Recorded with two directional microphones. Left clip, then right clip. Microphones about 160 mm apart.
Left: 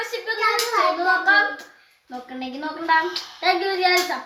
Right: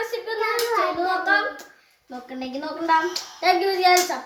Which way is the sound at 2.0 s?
10° right (ahead or behind).